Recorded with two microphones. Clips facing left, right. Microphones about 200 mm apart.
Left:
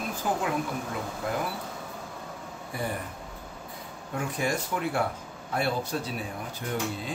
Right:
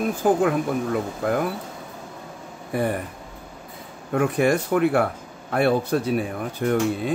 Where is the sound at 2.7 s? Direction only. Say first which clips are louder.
Right 9 dB; 60° right (ahead or behind).